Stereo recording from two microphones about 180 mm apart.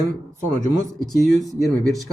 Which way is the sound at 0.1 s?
45° right (ahead or behind).